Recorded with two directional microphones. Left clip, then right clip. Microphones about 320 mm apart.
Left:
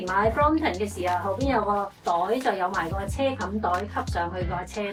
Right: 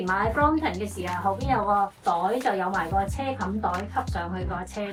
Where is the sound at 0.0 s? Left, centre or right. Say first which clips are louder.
Left 1 dB; centre.